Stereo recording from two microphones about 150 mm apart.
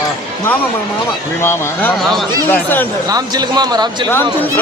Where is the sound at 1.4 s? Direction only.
15° left (ahead or behind).